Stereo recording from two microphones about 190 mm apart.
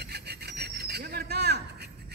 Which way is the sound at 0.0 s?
60° right (ahead or behind).